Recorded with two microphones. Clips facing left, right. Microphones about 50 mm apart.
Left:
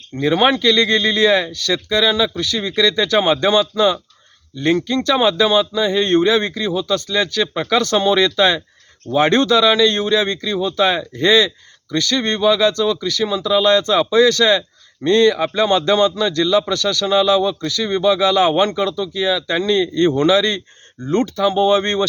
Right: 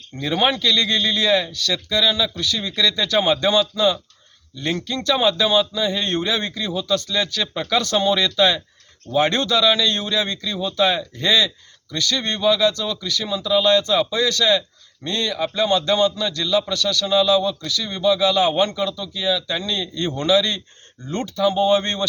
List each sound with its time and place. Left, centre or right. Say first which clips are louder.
0.2 s speech: left 5 dB; left
6.5 s speech: left 3 dB; centre
10.5 s speech: left 2 dB; centre; by 20.6 s left
21.4 s speech: left 1 dB; centre